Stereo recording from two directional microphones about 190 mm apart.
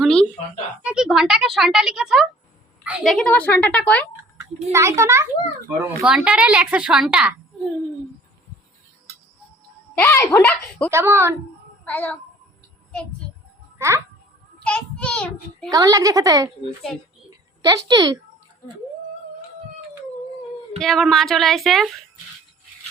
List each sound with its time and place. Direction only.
0.0 s fowl: 5° left (ahead or behind)
0.9 s a woman's voice: 5° right (ahead or behind)
4.7 s a child's voice: 15° right (ahead or behind)
10.0 s a woman's voice: 10° left (ahead or behind)
10.9 s a child's voice: 15° right (ahead or behind)
11.9 s a woman's voice: 10° left (ahead or behind)
13.7 s a child's voice: 15° right (ahead or behind)
14.6 s a child's voice: 5° left (ahead or behind)
15.7 s a woman's voice: 20° right (ahead or behind)
17.6 s a woman's voice: 20° right (ahead or behind)
20.7 s a woman's voice: centre (ahead or behind)